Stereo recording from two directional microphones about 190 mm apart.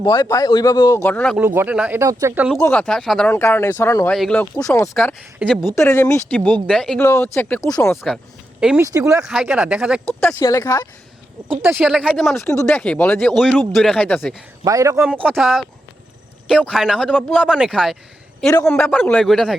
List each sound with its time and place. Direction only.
0.0 s a man's voice: 25° left (ahead or behind)
1.0 s speech: 5° left (ahead or behind)
1.4 s speech: 10° right (ahead or behind)
2.6 s speech: 10° left (ahead or behind)
4.5 s speech: 15° left (ahead or behind)
7.0 s speech: 15° left (ahead or behind)
8.6 s speech: 5° right (ahead or behind)
10.2 s speech: 15° left (ahead or behind)
11.6 s speech: 5° right (ahead or behind)
14.6 s speech: 15° right (ahead or behind)
15.1 s speech: 5° left (ahead or behind)